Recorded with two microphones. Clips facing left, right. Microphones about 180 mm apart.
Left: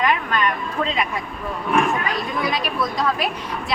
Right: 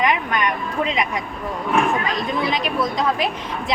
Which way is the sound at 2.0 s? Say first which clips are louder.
Right 1 dB; 20° right (ahead or behind).